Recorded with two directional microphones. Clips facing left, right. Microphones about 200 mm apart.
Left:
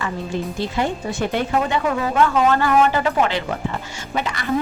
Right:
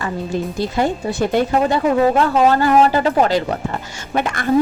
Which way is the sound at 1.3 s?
40° right (ahead or behind).